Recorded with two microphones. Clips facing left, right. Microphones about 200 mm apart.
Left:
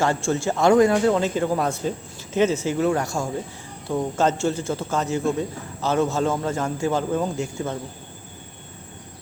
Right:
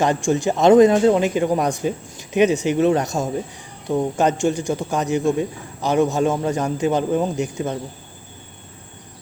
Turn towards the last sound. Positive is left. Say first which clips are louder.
# right 3 dB
turn(degrees=-20)  # may be behind; listen again after turning